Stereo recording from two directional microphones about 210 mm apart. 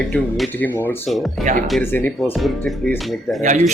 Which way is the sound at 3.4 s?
35° right (ahead or behind).